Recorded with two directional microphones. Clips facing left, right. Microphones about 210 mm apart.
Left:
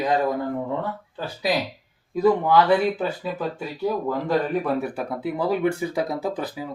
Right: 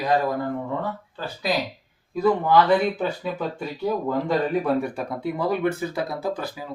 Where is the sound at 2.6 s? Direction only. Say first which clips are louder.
Even; 5° left (ahead or behind).